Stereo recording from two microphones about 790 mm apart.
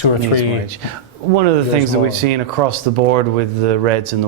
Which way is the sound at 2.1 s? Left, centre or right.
Right.